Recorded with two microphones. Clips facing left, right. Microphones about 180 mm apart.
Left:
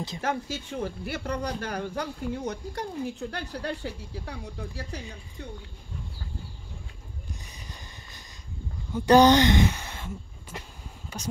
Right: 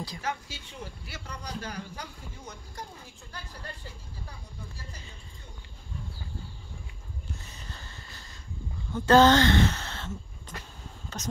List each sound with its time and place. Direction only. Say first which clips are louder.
0.2 s speech: left 9 dB; 50° left (ahead or behind); by 5.5 s 70° left (ahead or behind)
7.4 s a sound: even; 15° left (ahead or behind)
8.9 s speech: left 2 dB; 15° left (ahead or behind)